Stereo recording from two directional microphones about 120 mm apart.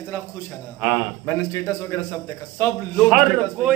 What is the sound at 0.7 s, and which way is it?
Speech, 5° right (ahead or behind).